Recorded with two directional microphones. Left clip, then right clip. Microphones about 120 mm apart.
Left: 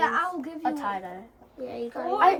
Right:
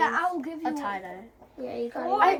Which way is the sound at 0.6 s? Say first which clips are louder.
Left 2 dB; 35° left (ahead or behind).